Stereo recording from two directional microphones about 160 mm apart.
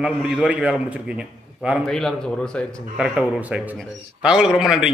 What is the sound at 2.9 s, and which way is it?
A man's voice, 5° right (ahead or behind).